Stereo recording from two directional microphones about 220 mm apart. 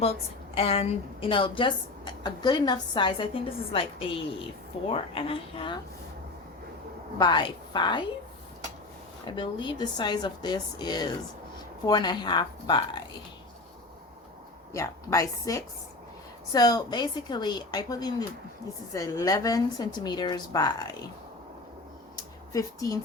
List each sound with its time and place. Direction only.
0.0 s a woman's voice: 25° left (ahead or behind)
7.2 s a woman's voice: 20° left (ahead or behind)
9.2 s a woman's voice: 20° left (ahead or behind)
14.7 s a woman's voice: 15° left (ahead or behind)
22.5 s a woman's voice: 15° left (ahead or behind)